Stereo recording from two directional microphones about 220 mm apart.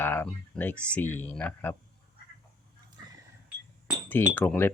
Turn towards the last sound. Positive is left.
turn(degrees=10)  # may be behind; listen again after turning